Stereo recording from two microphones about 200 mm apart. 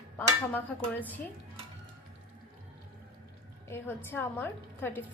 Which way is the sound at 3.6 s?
10° left (ahead or behind).